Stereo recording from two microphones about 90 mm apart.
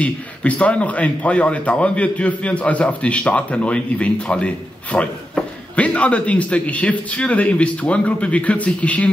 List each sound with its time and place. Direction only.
0.0 s a man's voice: 15° left (ahead or behind)